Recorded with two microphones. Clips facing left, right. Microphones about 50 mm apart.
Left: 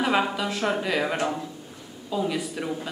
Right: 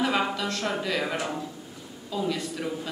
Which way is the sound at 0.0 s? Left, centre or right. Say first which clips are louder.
Left 2 dB; centre.